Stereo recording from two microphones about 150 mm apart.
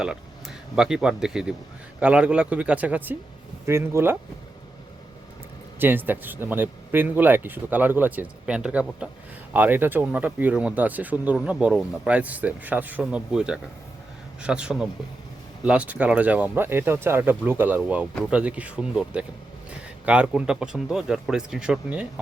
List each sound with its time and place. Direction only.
0.0 s speech: 5° right (ahead or behind)
5.8 s speech: 15° right (ahead or behind)